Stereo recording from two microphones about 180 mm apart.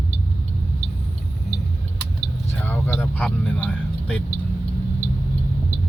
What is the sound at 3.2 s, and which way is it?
Speech, 5° left (ahead or behind).